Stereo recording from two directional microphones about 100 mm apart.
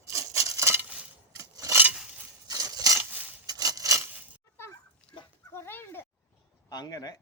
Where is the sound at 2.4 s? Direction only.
40° right (ahead or behind).